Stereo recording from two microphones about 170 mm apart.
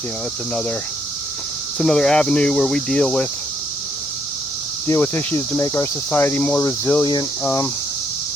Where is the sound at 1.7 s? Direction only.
5° left (ahead or behind).